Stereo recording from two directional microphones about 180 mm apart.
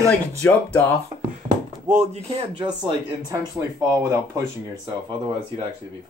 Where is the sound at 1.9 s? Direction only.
40° right (ahead or behind).